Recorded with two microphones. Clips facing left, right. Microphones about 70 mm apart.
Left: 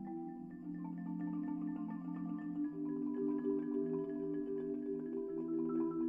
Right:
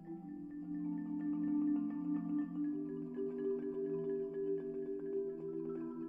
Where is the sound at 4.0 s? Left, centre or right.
Centre.